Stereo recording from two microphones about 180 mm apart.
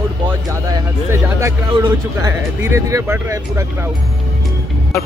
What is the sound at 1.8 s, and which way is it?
Speech, 15° right (ahead or behind).